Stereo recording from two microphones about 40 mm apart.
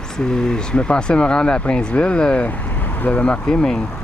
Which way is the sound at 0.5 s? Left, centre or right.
Left.